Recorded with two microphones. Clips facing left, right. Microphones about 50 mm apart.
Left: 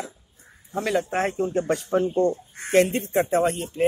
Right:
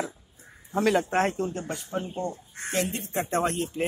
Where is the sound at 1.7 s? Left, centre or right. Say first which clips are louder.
Left 10 dB; left.